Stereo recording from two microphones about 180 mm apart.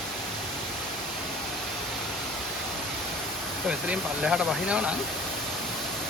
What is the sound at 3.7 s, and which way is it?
Speech, 5° right (ahead or behind).